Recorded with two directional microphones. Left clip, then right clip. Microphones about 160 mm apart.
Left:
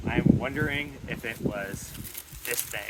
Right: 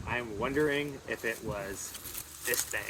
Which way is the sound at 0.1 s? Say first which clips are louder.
Left 5 dB; 10° left (ahead or behind).